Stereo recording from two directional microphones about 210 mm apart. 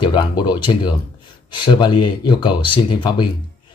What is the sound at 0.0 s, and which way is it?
Speech, 20° left (ahead or behind).